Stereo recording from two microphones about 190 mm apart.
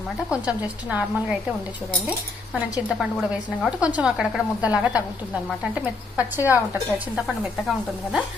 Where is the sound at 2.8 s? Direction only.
Centre (ahead or behind).